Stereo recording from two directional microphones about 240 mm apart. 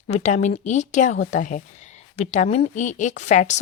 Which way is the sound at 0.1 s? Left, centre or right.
Left.